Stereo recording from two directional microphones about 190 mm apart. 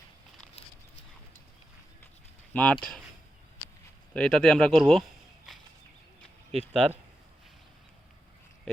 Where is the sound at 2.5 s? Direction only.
5° left (ahead or behind).